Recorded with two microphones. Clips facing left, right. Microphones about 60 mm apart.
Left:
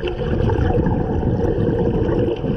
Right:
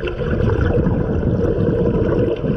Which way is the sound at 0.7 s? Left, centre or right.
Centre.